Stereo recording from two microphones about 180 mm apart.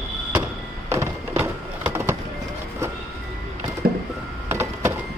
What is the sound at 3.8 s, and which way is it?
Music, 55° right (ahead or behind).